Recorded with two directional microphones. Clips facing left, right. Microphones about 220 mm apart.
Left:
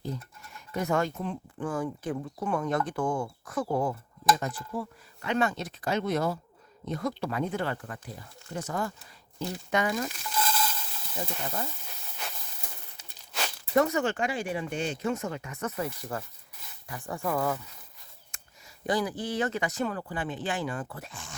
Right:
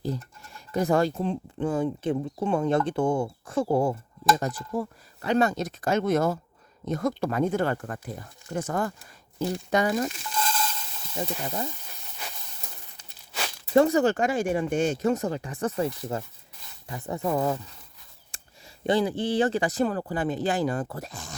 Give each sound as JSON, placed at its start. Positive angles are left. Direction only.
{"t": 0.0, "sound": "speech", "side_deg": -35}
{"t": 4.4, "sound": "speech", "side_deg": -40}
{"t": 9.6, "sound": "speech", "side_deg": -35}
{"t": 10.3, "sound": "stir", "side_deg": 5}
{"t": 11.4, "sound": "speech", "side_deg": -20}
{"t": 11.9, "sound": "hiss", "side_deg": 0}
{"t": 13.0, "sound": "a sound", "side_deg": 0}
{"t": 13.7, "sound": "speech", "side_deg": -30}
{"t": 18.3, "sound": "a sound", "side_deg": -30}
{"t": 18.9, "sound": "speech", "side_deg": -25}